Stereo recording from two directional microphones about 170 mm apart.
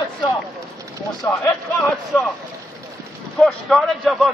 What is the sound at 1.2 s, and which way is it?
Speech, 15° left (ahead or behind).